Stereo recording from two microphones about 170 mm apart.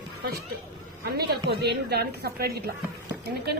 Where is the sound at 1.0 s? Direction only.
65° right (ahead or behind).